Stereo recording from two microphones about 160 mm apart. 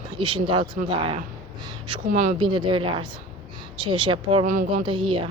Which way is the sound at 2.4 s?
30° right (ahead or behind).